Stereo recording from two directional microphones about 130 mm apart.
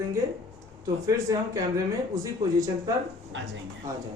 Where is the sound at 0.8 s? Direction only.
25° right (ahead or behind).